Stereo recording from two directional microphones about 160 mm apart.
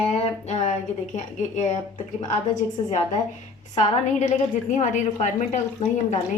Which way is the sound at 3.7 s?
50° left (ahead or behind).